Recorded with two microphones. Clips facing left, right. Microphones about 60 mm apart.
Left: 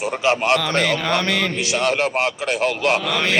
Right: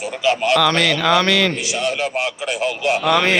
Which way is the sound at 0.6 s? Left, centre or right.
Right.